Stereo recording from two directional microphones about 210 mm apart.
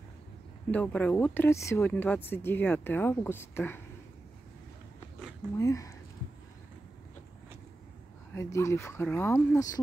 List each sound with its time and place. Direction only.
0.7 s speech: 5° left (ahead or behind)
5.6 s speech: 15° left (ahead or behind)
8.4 s speech: 15° left (ahead or behind)